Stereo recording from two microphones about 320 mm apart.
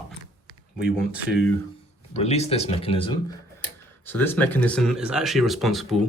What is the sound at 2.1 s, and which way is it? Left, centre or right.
Speech, centre.